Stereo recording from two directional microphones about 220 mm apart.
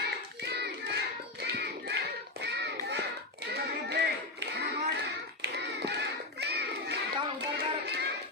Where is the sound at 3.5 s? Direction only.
50° right (ahead or behind).